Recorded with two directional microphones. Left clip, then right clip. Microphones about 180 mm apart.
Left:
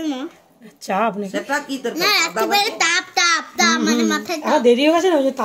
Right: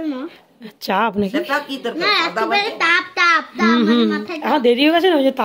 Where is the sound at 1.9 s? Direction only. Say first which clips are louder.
Even; centre (ahead or behind).